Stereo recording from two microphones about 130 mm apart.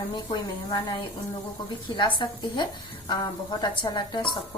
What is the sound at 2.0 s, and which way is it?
Speech, 40° left (ahead or behind).